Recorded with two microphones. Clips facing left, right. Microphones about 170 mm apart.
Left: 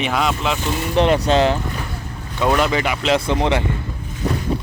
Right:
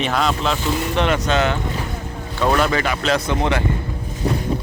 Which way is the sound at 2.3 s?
15° left (ahead or behind).